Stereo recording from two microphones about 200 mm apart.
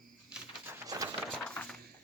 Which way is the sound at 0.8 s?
15° right (ahead or behind).